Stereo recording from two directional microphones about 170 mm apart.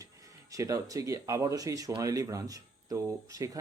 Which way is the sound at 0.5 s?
20° right (ahead or behind).